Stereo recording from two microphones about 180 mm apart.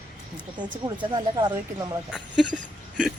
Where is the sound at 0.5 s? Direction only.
25° right (ahead or behind).